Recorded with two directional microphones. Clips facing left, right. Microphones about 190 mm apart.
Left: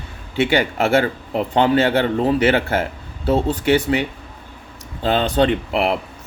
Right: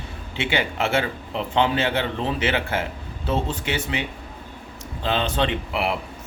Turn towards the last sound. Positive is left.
turn(degrees=45)  # may be behind; listen again after turning